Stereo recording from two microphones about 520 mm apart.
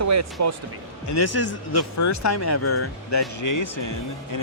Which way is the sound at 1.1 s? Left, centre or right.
Left.